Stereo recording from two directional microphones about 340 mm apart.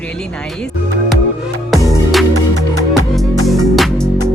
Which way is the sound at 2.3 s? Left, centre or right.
Right.